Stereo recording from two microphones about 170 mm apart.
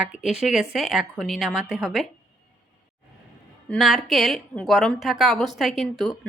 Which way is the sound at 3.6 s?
Centre (ahead or behind).